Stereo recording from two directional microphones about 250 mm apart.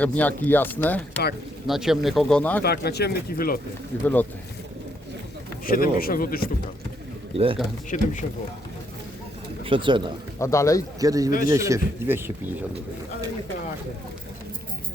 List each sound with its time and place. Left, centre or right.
0.0 s speech: centre
2.6 s speech: left
4.0 s speech: centre
5.6 s speech: left
7.3 s speech: right
7.9 s speech: left
9.6 s speech: centre
10.3 s speech: centre
11.0 s a man's voice: centre